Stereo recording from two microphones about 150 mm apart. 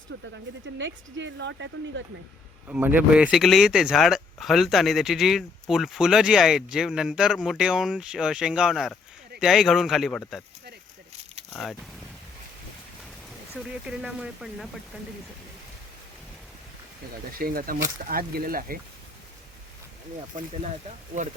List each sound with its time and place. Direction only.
0.1 s speech: 90° right
2.6 s speech: 10° right (ahead or behind)
11.5 s speech: 5° left (ahead or behind)
13.7 s speech: 5° right (ahead or behind)
17.3 s speech: 75° right (ahead or behind)